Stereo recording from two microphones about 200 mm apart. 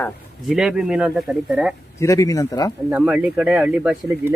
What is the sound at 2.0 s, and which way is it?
Speech, 15° left (ahead or behind).